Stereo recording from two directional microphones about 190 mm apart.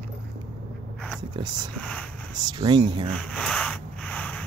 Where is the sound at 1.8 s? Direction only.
5° left (ahead or behind).